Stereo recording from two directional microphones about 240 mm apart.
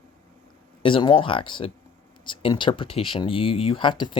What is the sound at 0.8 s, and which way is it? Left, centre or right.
Speech, left.